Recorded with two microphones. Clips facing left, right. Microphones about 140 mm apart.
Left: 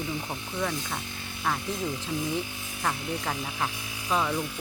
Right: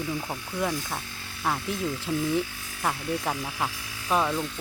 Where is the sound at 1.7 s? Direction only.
20° left (ahead or behind).